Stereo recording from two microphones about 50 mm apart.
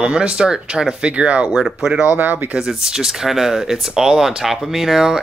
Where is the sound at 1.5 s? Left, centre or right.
Centre.